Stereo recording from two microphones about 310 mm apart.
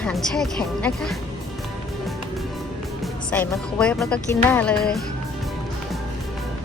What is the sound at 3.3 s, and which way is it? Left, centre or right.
A woman's voice, centre.